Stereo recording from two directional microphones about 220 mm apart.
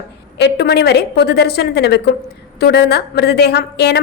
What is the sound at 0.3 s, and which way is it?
A woman's voice, 45° left (ahead or behind).